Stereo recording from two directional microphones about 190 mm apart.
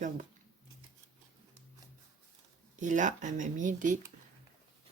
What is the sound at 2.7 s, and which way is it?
Speech, 40° right (ahead or behind).